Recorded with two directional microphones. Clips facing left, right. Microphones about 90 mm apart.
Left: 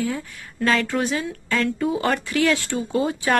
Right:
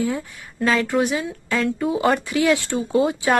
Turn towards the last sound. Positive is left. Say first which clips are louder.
# right 3 dB
turn(degrees=-20)  # may be behind; listen again after turning